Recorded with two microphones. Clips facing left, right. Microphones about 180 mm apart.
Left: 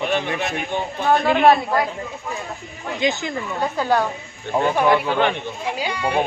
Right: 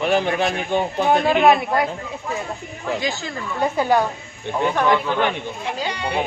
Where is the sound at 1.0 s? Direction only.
20° right (ahead or behind).